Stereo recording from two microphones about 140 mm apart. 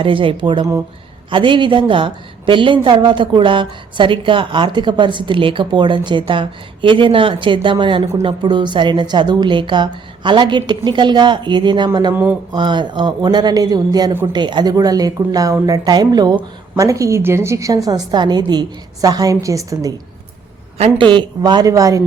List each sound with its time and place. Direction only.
0.0 s a woman's voice: 40° right (ahead or behind)
12.1 s speech: 10° right (ahead or behind)
12.5 s a woman's voice: 35° right (ahead or behind)
20.7 s a woman's voice: 40° right (ahead or behind); by 22.0 s 25° right (ahead or behind)